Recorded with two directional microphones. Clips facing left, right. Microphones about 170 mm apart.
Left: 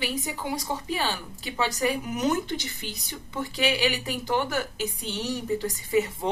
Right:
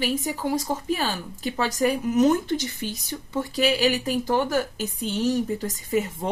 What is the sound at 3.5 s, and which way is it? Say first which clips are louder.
A woman's voice: right 4 dB; 40° right (ahead or behind).